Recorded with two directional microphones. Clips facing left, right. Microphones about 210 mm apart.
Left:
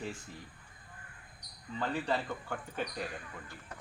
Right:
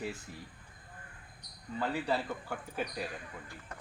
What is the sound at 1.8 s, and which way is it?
Speech, 5° right (ahead or behind).